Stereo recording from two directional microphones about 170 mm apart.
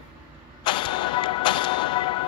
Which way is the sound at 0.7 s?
30° left (ahead or behind).